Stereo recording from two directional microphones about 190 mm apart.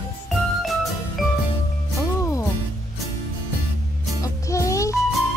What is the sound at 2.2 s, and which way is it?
Music, 15° left (ahead or behind).